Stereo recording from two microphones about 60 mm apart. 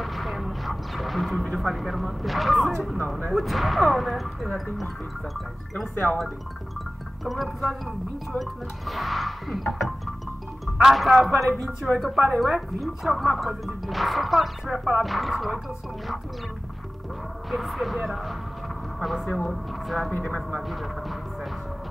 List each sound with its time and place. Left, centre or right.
0.0 s music: centre
1.6 s speech: centre
7.2 s speech: centre
17.5 s speech: centre
20.1 s speech: left
20.3 s speech: centre